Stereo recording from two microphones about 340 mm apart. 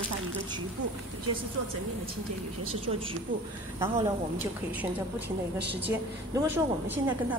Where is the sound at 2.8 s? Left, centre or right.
Centre.